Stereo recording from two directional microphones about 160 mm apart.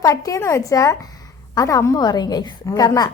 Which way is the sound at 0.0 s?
20° left (ahead or behind).